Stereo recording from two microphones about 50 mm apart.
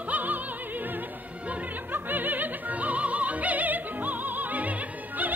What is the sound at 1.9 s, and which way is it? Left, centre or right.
Opera, right.